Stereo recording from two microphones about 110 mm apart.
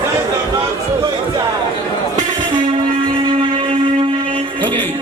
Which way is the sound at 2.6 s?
45° right (ahead or behind).